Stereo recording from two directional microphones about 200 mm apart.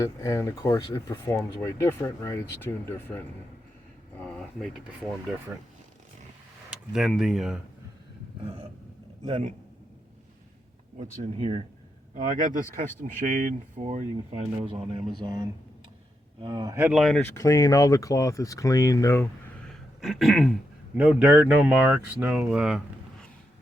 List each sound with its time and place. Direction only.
0.0 s speech: 15° left (ahead or behind)
4.2 s a sound: 5° left (ahead or behind)
6.7 s speech: centre (ahead or behind)
9.2 s speech: 35° right (ahead or behind)
11.3 s speech: 25° right (ahead or behind)
12.1 s speech: 40° right (ahead or behind)
14.3 s speech: 25° right (ahead or behind)
16.7 s speech: 10° right (ahead or behind)
17.0 s speech: 5° left (ahead or behind)